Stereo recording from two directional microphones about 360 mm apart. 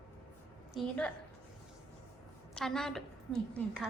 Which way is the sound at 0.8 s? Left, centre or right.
Centre.